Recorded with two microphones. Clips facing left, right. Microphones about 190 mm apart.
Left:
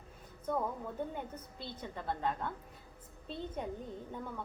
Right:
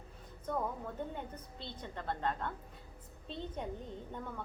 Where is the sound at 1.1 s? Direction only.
5° left (ahead or behind).